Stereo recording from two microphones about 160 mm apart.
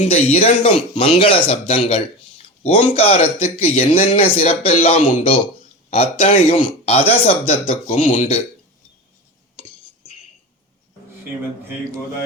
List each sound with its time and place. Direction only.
0.0 s a man's voice: 40° left (ahead or behind)
8.0 s speech: 55° left (ahead or behind)